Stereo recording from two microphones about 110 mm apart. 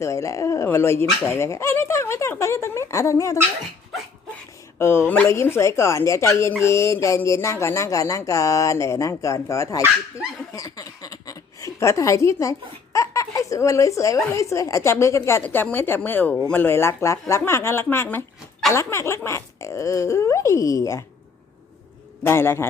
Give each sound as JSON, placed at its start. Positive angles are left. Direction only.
{"t": 0.0, "sound": "speech", "side_deg": 30}
{"t": 4.8, "sound": "speech", "side_deg": 20}
{"t": 10.5, "sound": "a sound", "side_deg": 30}
{"t": 14.3, "sound": "a woman's voice", "side_deg": 25}
{"t": 22.2, "sound": "speech", "side_deg": 20}